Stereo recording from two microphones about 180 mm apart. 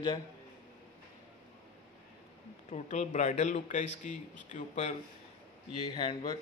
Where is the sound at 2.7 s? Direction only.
40° left (ahead or behind).